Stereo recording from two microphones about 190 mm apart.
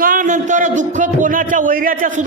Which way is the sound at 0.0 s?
45° right (ahead or behind).